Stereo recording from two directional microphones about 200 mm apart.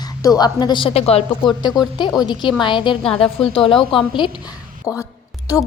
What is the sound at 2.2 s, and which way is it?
A woman's voice, 20° left (ahead or behind).